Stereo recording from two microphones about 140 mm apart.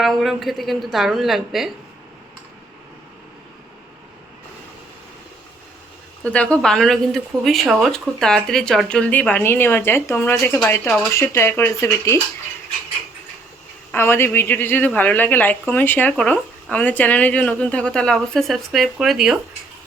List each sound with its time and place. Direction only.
0.0 s a woman's voice: centre (ahead or behind)
6.2 s speech: 10° left (ahead or behind)
13.9 s speech: 15° left (ahead or behind); by 19.4 s 5° right (ahead or behind)